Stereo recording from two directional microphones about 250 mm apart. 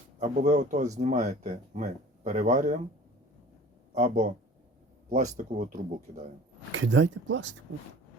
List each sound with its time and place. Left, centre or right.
0.2 s speech: right
3.9 s speech: right
6.7 s speech: right